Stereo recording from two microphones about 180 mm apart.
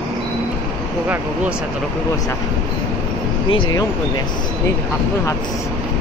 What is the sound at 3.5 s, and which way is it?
Speech, 20° left (ahead or behind).